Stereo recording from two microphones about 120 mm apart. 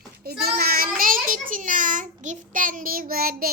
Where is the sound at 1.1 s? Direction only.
90° right.